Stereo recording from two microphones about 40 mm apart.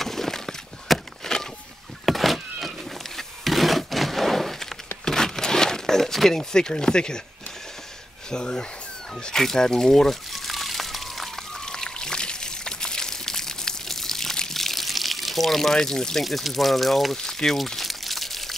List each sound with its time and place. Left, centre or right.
0.0 s a sound: centre
2.0 s power windows: centre
3.2 s a sound: centre
6.5 s speech: centre
8.3 s speech: left
10.3 s a sound: centre
11.5 s pour: centre
16.3 s speech: centre
17.6 s crunch: centre